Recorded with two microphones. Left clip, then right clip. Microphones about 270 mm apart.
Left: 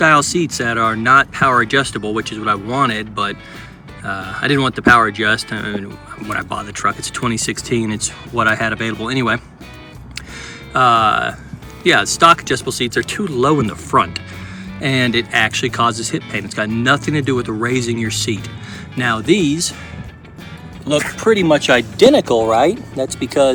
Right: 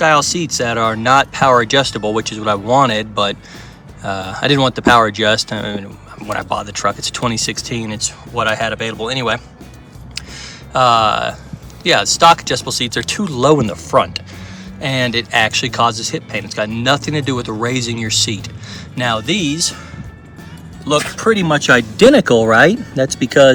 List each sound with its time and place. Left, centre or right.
0.0 s speech: centre
10.7 s speech: centre
20.8 s speech: centre
21.3 s speech: right
22.4 s speech: right